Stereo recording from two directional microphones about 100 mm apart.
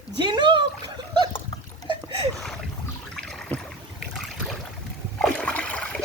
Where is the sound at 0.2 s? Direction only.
50° right (ahead or behind).